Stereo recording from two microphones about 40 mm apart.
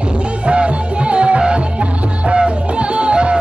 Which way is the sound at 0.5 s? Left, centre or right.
Right.